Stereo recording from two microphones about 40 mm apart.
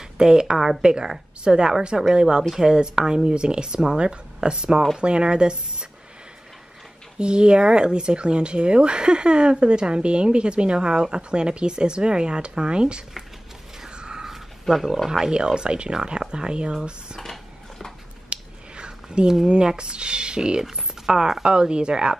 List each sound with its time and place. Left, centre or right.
0.0 s a woman's voice: centre
7.2 s speech: right
13.7 s mechanisms: right
14.3 s roaring cats: centre
15.0 s speech: centre
17.2 s a sound: centre
18.3 s finger snapping: right
19.4 s speech: centre